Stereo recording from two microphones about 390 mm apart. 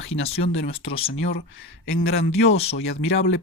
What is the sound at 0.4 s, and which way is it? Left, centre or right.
Speech, left.